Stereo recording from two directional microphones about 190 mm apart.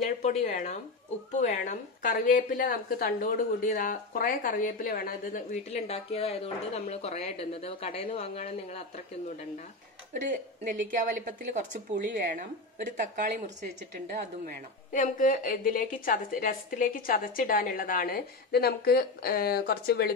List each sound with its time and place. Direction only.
0.0 s a woman's voice: 35° left (ahead or behind)
5.7 s speech: 35° left (ahead or behind)
10.2 s speech: 45° right (ahead or behind)
11.9 s speech: 60° right (ahead or behind)
12.4 s speech: 45° right (ahead or behind)
14.9 s a woman's voice: 45° left (ahead or behind)